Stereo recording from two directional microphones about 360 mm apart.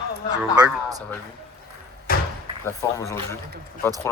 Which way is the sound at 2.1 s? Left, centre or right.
Left.